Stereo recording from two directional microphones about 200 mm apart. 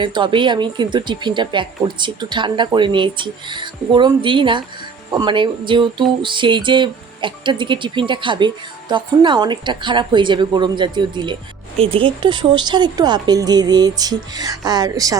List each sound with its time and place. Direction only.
0.0 s speech: 25° right (ahead or behind)